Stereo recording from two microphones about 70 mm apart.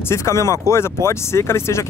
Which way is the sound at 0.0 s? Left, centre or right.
Left.